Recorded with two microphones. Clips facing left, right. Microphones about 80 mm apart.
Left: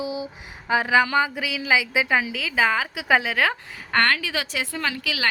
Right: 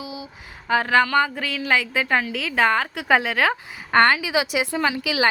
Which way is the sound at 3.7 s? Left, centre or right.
Centre.